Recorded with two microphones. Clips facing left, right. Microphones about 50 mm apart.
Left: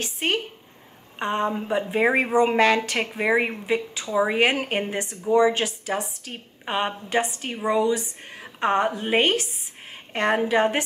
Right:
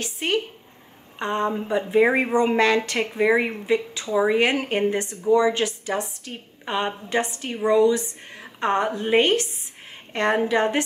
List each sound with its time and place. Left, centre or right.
0.0 s speech: left
1.2 s a woman's voice: centre
2.0 s speech: centre
2.3 s a woman's voice: centre